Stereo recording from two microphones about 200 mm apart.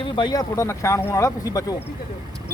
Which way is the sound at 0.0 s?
20° left (ahead or behind).